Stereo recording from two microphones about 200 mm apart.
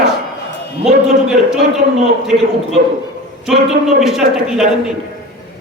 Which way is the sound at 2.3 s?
40° right (ahead or behind).